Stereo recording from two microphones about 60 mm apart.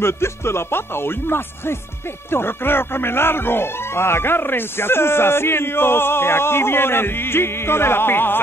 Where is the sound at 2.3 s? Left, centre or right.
Left.